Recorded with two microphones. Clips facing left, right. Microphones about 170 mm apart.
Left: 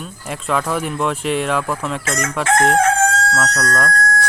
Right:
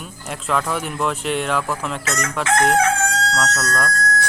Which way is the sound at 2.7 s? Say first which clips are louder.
Left 3 dB; 50° left (ahead or behind).